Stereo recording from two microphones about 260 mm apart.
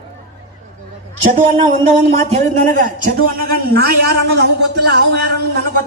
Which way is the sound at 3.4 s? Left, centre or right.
Right.